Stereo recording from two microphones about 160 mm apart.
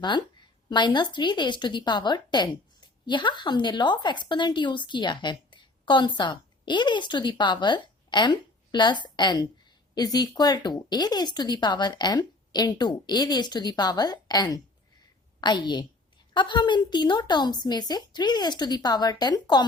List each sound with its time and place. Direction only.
0.0 s a woman's voice: 30° left (ahead or behind)